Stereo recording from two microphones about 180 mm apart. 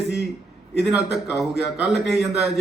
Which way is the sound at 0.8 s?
5° right (ahead or behind).